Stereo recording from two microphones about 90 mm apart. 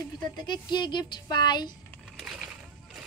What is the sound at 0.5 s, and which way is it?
Speech, 55° left (ahead or behind).